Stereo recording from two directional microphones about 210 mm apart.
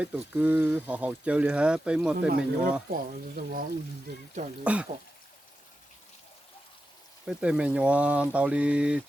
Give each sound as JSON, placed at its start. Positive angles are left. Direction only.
{"t": 0.0, "sound": "speech", "side_deg": -5}
{"t": 2.1, "sound": "speech", "side_deg": -40}
{"t": 4.6, "sound": "speech", "side_deg": -5}
{"t": 7.3, "sound": "speech", "side_deg": -5}